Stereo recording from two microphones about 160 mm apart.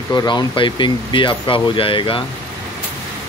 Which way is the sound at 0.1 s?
25° left (ahead or behind).